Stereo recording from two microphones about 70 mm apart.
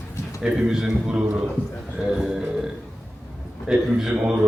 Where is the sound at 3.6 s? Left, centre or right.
Centre.